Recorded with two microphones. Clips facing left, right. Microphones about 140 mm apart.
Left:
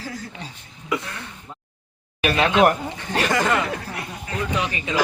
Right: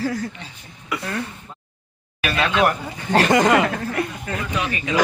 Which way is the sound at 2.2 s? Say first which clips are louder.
Left 2 dB; 25° left (ahead or behind).